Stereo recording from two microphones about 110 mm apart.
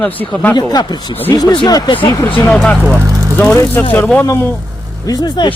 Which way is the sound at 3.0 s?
30° right (ahead or behind).